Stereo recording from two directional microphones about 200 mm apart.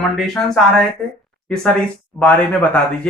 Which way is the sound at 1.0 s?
10° left (ahead or behind).